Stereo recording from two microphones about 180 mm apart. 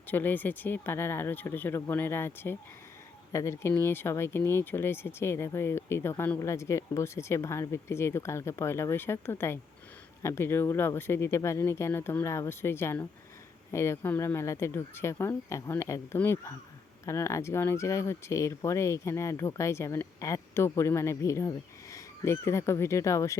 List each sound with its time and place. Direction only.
0.1 s speech: 10° left (ahead or behind)